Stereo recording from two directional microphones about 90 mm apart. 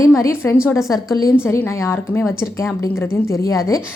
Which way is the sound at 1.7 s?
30° left (ahead or behind).